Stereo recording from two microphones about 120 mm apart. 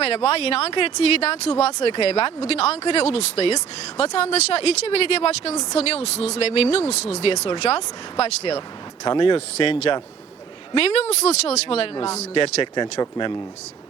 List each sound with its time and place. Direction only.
0.0 s speech: 60° left (ahead or behind)
9.0 s speech: 45° left (ahead or behind)